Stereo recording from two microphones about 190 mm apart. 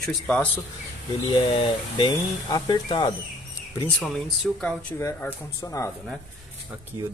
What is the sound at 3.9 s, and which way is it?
Speech, centre (ahead or behind).